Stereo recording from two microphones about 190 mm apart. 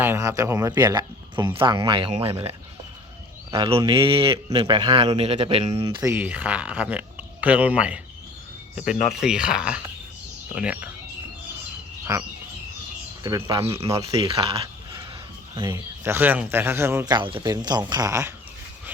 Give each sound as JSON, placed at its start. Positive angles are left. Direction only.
{"t": 0.0, "sound": "speech", "side_deg": -15}
{"t": 3.5, "sound": "speech", "side_deg": -30}
{"t": 6.0, "sound": "speech", "side_deg": -10}
{"t": 9.2, "sound": "speech", "side_deg": -5}
{"t": 12.1, "sound": "speech", "side_deg": -20}
{"t": 14.1, "sound": "speech", "side_deg": -25}
{"t": 15.5, "sound": "speech", "side_deg": -15}
{"t": 17.2, "sound": "speech", "side_deg": -25}